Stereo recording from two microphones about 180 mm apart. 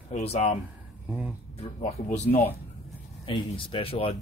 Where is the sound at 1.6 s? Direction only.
40° left (ahead or behind).